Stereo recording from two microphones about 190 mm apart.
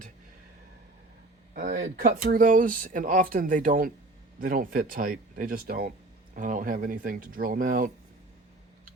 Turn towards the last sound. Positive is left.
turn(degrees=-45)  # may be behind; listen again after turning